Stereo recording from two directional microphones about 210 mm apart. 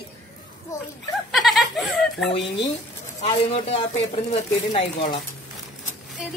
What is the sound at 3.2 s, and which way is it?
Speech, 25° left (ahead or behind).